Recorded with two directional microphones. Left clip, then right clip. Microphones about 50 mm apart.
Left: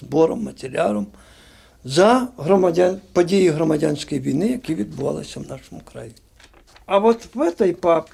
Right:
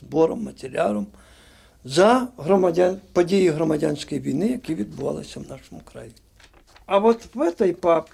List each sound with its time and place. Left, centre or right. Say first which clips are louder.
0.1 s speech: left 3 dB; left
4.4 s speech: left 2 dB; left
7.7 s speech: left 1 dB; centre